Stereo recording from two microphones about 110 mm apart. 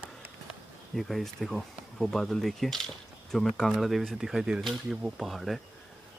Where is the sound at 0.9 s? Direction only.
Centre (ahead or behind).